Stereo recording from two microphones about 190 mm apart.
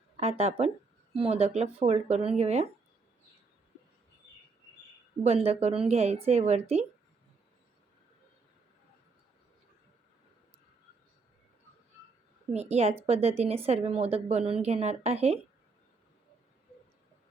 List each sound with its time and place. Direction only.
0.2 s a woman's voice: 35° right (ahead or behind)
5.2 s a woman's voice: 35° right (ahead or behind)
12.5 s a woman's voice: 35° right (ahead or behind)